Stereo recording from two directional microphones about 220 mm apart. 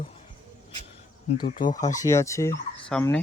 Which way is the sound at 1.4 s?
40° left (ahead or behind).